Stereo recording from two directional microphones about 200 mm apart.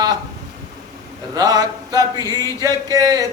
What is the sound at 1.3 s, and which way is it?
A man's voice, 20° right (ahead or behind).